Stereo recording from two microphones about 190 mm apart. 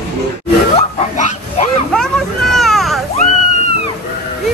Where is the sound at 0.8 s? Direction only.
35° left (ahead or behind).